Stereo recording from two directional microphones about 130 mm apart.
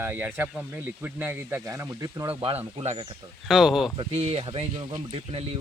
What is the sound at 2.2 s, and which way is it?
Speech, 40° right (ahead or behind).